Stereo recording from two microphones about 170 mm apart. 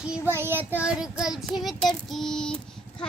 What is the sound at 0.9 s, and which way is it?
Child singing, 5° right (ahead or behind).